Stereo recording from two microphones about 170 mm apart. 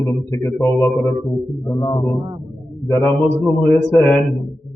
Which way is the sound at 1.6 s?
20° left (ahead or behind).